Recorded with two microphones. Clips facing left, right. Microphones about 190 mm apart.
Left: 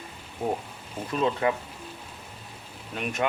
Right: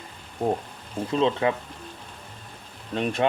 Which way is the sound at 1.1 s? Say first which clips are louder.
Right 2 dB; 25° right (ahead or behind).